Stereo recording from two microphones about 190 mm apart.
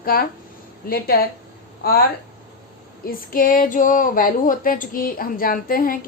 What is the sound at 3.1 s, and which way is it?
Speech, 50° left (ahead or behind).